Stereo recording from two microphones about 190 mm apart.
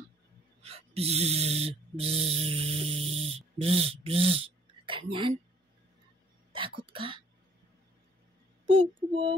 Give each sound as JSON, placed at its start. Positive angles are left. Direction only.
{"t": 0.6, "sound": "a sound", "side_deg": -30}
{"t": 5.1, "sound": "speech", "side_deg": -25}
{"t": 6.9, "sound": "speech", "side_deg": -25}
{"t": 8.6, "sound": "speech", "side_deg": -25}